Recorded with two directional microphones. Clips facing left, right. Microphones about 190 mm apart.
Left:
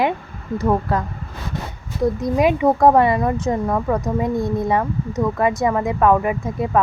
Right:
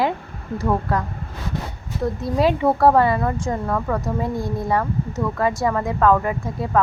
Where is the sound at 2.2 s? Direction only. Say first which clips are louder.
Left 1 dB; 15° left (ahead or behind).